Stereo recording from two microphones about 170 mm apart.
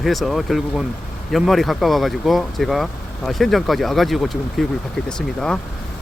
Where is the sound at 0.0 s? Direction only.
Centre (ahead or behind).